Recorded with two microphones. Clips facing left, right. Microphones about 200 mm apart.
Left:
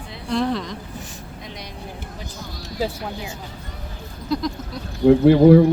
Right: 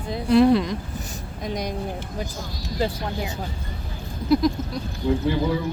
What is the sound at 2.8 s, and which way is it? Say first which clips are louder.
Speech: even; 5° left (ahead or behind).